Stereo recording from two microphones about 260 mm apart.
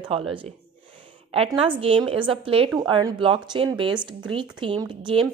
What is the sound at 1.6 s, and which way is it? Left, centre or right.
Speech, right.